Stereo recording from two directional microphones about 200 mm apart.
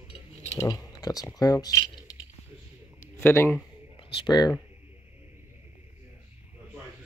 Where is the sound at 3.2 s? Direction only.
10° left (ahead or behind).